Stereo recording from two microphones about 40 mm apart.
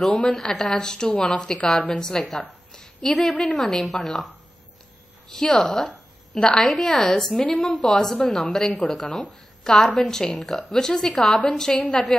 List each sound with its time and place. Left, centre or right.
0.0 s a woman's voice: centre
2.2 s a woman's voice: centre
5.3 s a woman's voice: centre
6.6 s a woman's voice: centre
11.7 s a woman's voice: left